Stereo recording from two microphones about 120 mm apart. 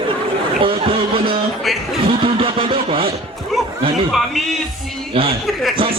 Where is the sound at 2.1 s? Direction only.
45° right (ahead or behind).